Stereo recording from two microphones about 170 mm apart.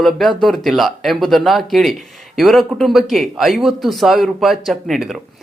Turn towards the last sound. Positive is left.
turn(degrees=0)  # may be behind; listen again after turning